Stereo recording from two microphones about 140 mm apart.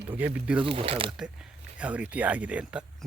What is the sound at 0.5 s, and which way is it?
Speech, 40° right (ahead or behind).